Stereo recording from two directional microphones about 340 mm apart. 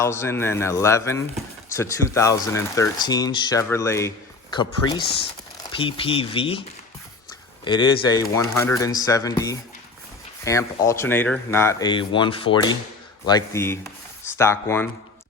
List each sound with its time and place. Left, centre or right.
0.0 s speech: centre
10.4 s speech: centre